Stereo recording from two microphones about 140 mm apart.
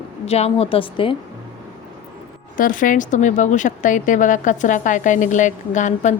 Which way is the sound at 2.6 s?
70° left (ahead or behind).